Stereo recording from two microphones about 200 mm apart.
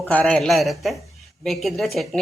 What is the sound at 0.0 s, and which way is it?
Speech, 10° left (ahead or behind).